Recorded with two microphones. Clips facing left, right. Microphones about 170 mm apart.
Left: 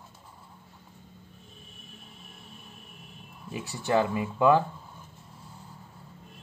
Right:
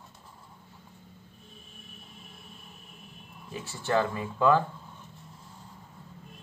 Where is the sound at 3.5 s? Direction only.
15° left (ahead or behind).